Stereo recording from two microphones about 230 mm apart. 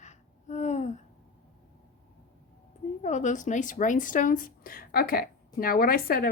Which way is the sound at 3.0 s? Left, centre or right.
Left.